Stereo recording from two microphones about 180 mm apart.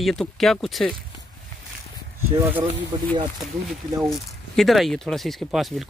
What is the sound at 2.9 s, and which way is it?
Speech, 25° right (ahead or behind).